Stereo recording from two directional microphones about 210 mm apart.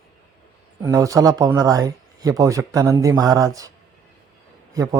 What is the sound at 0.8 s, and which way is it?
Speech, 15° right (ahead or behind).